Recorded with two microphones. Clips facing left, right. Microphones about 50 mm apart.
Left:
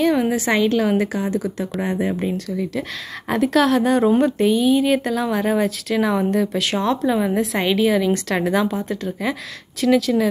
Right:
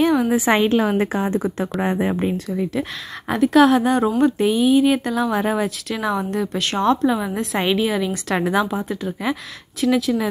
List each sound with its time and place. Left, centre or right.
0.5 s speech: right
1.0 s speech: right; by 10.2 s centre